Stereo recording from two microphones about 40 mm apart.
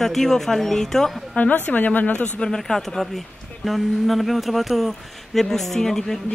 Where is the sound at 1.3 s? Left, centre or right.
Left.